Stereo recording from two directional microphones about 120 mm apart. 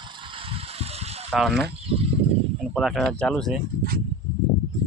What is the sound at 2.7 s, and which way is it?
Speech, centre (ahead or behind).